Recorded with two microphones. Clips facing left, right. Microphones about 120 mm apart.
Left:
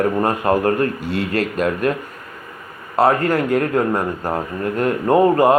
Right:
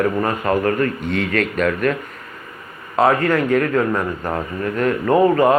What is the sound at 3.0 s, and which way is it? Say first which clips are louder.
Speech: even; 35° left (ahead or behind).